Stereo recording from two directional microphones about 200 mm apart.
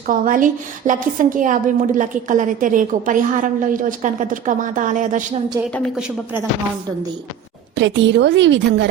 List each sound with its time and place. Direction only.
0.1 s a woman's voice: 40° right (ahead or behind)
5.7 s a woman's voice: centre (ahead or behind)
7.8 s a woman's voice: 65° right (ahead or behind)